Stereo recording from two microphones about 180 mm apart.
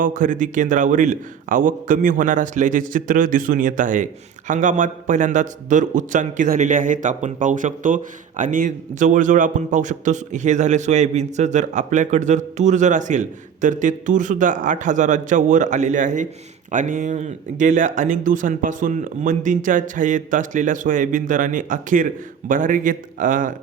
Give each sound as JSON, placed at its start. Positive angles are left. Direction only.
{"t": 0.0, "sound": "a man's voice", "side_deg": -45}